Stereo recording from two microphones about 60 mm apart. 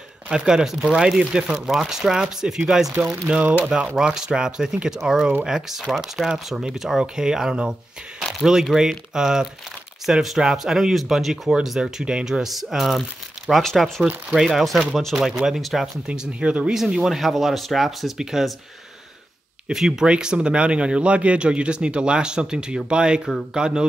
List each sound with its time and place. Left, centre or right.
0.3 s speech: centre
3.0 s speech: centre
8.7 s speech: centre
12.0 s speech: centre
15.1 s speech: centre
16.1 s speech: centre
16.7 s speech: centre
19.7 s speech: centre